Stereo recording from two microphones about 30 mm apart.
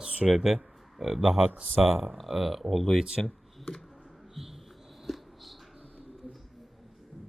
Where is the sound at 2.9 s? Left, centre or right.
Right.